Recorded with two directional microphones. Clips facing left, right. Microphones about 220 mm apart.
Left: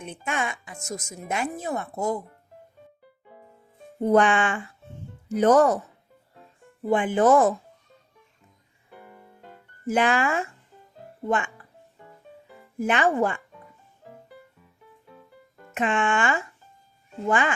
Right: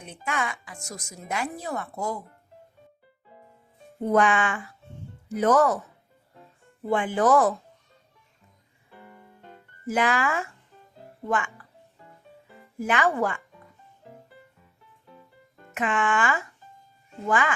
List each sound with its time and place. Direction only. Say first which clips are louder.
0.0 s speech: left 1 dB; 25° left (ahead or behind)
4.1 s speech: left 2 dB; 30° left (ahead or behind)
6.9 s speech: left 2 dB; 20° left (ahead or behind)
9.9 s speech: left 2 dB; 25° left (ahead or behind)
12.8 s speech: left 2 dB; 30° left (ahead or behind)
15.7 s speech: left 2 dB; 25° left (ahead or behind)